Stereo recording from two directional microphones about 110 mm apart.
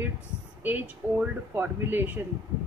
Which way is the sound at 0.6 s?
15° right (ahead or behind).